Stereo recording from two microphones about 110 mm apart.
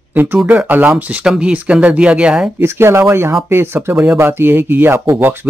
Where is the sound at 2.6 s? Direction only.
25° right (ahead or behind).